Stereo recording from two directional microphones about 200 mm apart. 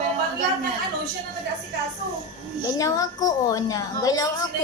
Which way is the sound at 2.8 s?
15° left (ahead or behind).